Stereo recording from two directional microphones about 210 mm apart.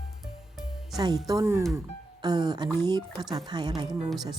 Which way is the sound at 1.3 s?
15° right (ahead or behind).